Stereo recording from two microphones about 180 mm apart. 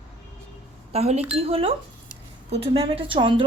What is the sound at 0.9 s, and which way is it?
A woman's voice, 35° right (ahead or behind).